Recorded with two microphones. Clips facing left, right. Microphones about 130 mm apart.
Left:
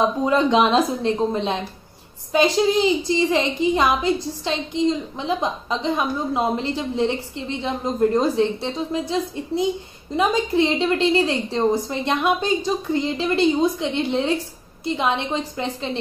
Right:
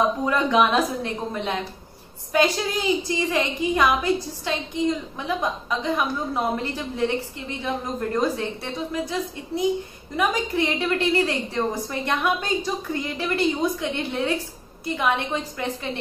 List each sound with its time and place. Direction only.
0.2 s a woman's voice: 25° left (ahead or behind)
10.1 s a woman's voice: 25° left (ahead or behind)